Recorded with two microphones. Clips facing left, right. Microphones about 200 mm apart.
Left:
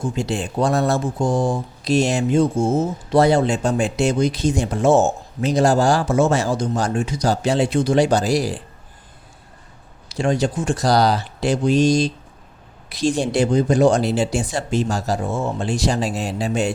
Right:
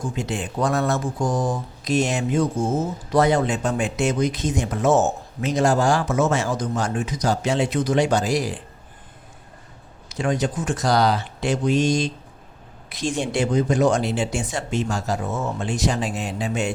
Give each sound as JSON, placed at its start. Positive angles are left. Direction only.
{"t": 0.0, "sound": "speech", "side_deg": 30}
{"t": 10.1, "sound": "speech", "side_deg": 30}